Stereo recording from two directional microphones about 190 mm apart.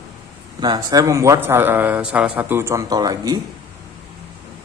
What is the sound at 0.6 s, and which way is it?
A man's voice, 20° right (ahead or behind).